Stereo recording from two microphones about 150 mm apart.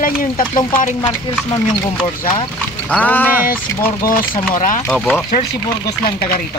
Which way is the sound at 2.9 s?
10° left (ahead or behind).